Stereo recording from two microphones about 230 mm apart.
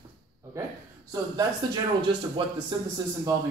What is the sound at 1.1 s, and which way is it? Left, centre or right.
Speech, centre.